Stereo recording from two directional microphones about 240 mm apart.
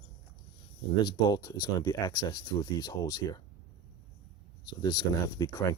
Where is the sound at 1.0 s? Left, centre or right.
Centre.